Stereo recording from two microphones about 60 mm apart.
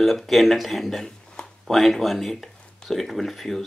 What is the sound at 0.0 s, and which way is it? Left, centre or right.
Speech, centre.